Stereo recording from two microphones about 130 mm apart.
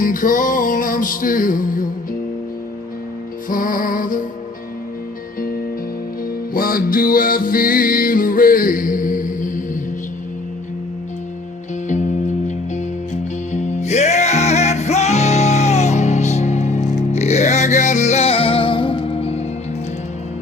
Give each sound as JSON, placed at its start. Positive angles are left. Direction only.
{"t": 0.0, "sound": "music", "side_deg": 90}
{"t": 3.5, "sound": "music", "side_deg": 90}
{"t": 6.5, "sound": "music", "side_deg": 90}
{"t": 13.5, "sound": "music", "side_deg": 60}